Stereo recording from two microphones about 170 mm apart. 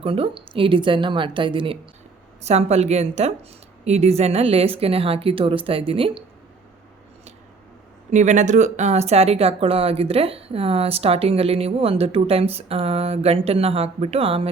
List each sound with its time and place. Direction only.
0.0 s speech: 35° right (ahead or behind)
8.1 s speech: 45° right (ahead or behind)